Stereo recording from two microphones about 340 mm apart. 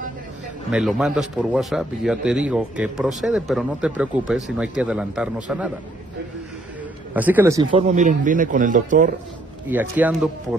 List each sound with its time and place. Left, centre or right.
0.7 s speech: centre
7.2 s a man's voice: centre; by 9.1 s right
9.7 s speech: centre